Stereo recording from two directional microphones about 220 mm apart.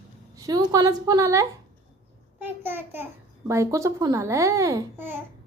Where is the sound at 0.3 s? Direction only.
15° right (ahead or behind).